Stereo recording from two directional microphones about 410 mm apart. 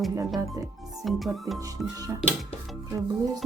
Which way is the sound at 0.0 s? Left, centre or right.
Centre.